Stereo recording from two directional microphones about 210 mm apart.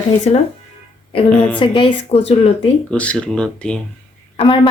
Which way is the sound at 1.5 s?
25° left (ahead or behind).